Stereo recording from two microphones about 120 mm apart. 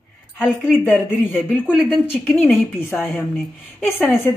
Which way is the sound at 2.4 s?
20° left (ahead or behind).